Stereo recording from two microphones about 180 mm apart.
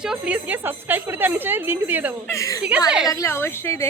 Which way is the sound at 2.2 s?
15° left (ahead or behind).